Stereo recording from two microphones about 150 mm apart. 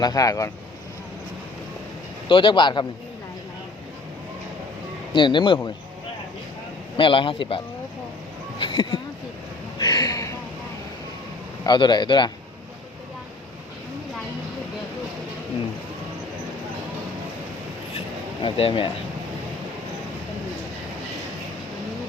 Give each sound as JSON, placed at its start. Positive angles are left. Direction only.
{"t": 0.0, "sound": "a man's voice", "side_deg": 25}
{"t": 2.3, "sound": "a man's voice", "side_deg": 30}
{"t": 5.1, "sound": "a man's voice", "side_deg": 30}
{"t": 6.9, "sound": "a man's voice", "side_deg": 35}
{"t": 9.7, "sound": "a sound", "side_deg": 25}
{"t": 11.6, "sound": "a man's voice", "side_deg": 30}
{"t": 18.4, "sound": "a man's voice", "side_deg": 35}